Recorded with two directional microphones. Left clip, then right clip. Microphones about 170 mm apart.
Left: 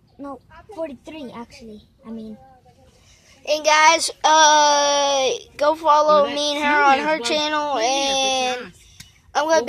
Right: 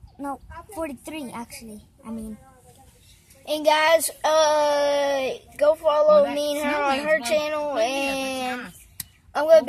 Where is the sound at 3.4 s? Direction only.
10° left (ahead or behind).